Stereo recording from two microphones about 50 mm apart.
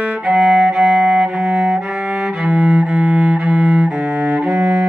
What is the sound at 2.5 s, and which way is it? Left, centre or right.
Cello, centre.